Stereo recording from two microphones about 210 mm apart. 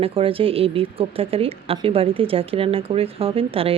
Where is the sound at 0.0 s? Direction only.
25° right (ahead or behind).